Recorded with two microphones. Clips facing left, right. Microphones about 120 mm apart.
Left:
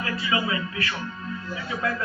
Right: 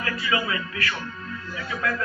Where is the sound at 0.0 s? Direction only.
25° left (ahead or behind).